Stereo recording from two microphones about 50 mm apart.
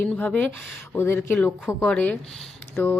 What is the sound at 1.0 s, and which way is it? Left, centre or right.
Speech, left.